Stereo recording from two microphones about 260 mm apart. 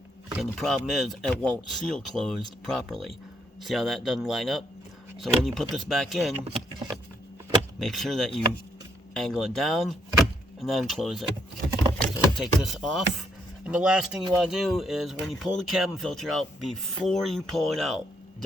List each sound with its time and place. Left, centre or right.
0.3 s speech: centre
6.4 s speech: right
7.8 s speech: centre
12.4 s speech: centre